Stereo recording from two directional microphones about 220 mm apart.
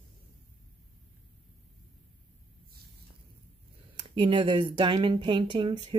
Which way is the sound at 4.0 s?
20° right (ahead or behind).